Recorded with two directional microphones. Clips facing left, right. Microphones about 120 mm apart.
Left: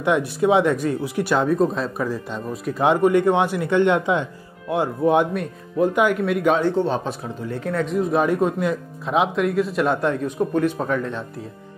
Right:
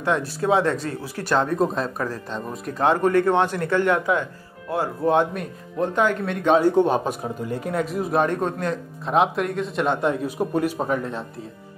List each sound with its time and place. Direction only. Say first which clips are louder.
0.0 s a man's voice: left 4 dB; 15° left (ahead or behind)
1.6 s a man's voice: left 2 dB; centre (ahead or behind)
2.0 s a man's voice: left 3 dB; 10° left (ahead or behind)
5.3 s a man's voice: left 5 dB; centre (ahead or behind)
6.6 s a man's voice: right 2 dB; 15° right (ahead or behind)